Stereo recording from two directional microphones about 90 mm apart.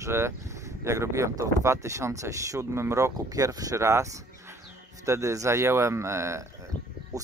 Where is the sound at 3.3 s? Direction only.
40° right (ahead or behind).